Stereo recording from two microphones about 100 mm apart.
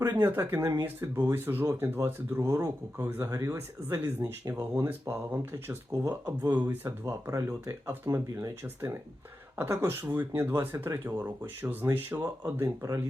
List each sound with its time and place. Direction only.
0.2 s speech: 20° right (ahead or behind)
4.2 s speech: 35° right (ahead or behind)
4.7 s speech: 25° right (ahead or behind)